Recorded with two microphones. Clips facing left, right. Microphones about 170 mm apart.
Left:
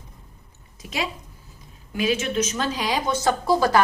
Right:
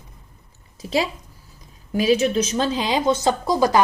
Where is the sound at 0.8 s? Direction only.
30° right (ahead or behind).